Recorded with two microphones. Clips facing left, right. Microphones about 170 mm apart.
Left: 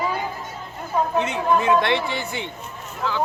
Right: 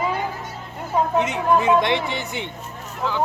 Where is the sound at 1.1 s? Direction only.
20° right (ahead or behind).